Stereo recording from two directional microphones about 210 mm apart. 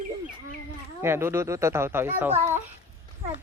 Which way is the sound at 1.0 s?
10° right (ahead or behind).